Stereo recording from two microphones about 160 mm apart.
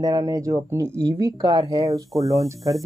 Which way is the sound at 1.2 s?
25° right (ahead or behind).